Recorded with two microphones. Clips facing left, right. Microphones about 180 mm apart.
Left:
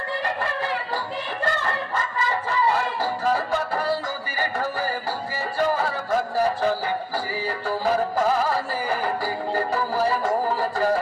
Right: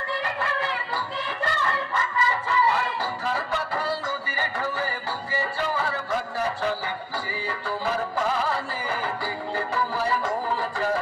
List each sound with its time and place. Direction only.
1.4 s a sound: 45° left (ahead or behind)
2.7 s music: 40° left (ahead or behind)
4.4 s a sound: 45° left (ahead or behind)
5.6 s music: 45° left (ahead or behind)
7.8 s music: 40° left (ahead or behind)
9.6 s music: 40° left (ahead or behind)